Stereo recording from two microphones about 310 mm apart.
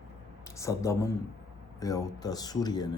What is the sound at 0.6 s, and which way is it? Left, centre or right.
Speech, centre.